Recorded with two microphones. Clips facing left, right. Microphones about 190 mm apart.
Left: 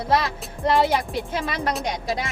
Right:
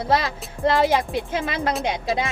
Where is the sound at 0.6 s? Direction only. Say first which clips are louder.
Right 2 dB; centre (ahead or behind).